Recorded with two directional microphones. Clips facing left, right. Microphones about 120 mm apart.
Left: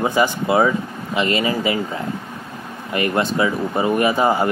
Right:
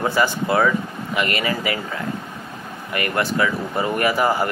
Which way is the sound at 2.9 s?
20° left (ahead or behind).